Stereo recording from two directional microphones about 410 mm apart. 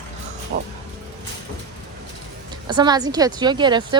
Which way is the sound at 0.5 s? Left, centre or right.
Right.